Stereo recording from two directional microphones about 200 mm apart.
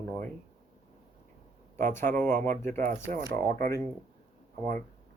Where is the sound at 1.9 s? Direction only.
10° left (ahead or behind).